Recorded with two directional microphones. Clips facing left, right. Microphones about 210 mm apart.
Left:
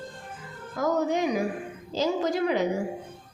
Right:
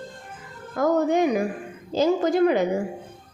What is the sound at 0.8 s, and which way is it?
A woman's voice, 55° right (ahead or behind).